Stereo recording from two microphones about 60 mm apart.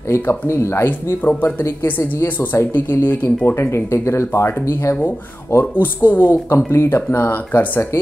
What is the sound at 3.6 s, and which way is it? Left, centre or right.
Speech, left.